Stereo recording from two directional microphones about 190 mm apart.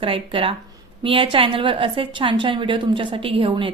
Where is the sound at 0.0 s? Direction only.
30° right (ahead or behind).